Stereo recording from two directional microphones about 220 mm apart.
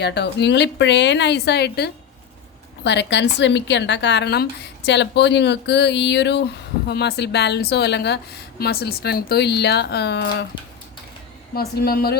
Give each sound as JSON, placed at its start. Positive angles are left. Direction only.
{"t": 0.0, "sound": "a woman's voice", "side_deg": 50}
{"t": 11.5, "sound": "a woman's voice", "side_deg": 45}